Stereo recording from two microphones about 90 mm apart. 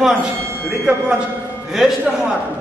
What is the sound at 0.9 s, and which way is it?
A man's voice, 10° right (ahead or behind).